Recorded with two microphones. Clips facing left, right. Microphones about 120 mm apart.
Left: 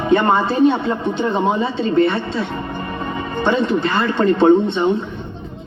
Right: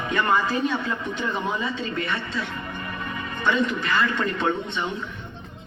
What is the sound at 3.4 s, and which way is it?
Speech, 30° left (ahead or behind).